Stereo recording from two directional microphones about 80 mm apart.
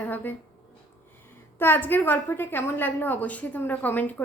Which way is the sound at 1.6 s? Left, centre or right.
Left.